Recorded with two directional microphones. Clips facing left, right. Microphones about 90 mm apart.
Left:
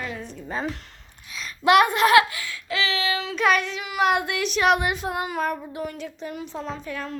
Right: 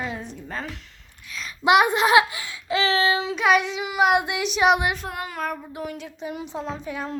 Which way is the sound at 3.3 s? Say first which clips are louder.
Left 1 dB; 10° right (ahead or behind).